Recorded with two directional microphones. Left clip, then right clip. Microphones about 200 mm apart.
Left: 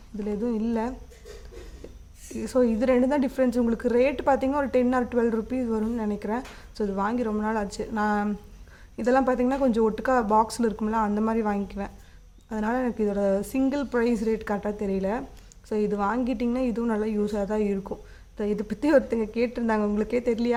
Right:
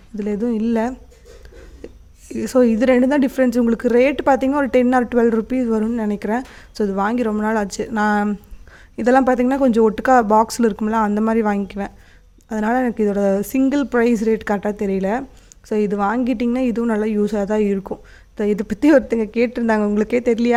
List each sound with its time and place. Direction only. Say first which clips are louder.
0.2 s a woman's voice: right 7 dB; 35° right (ahead or behind)
1.8 s a sound: right 13 dB; 35° right (ahead or behind)
2.3 s a woman's voice: right 8 dB; 35° right (ahead or behind)